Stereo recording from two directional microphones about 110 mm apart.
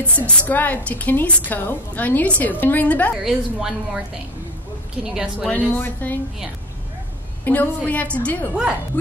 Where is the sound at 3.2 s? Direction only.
5° right (ahead or behind).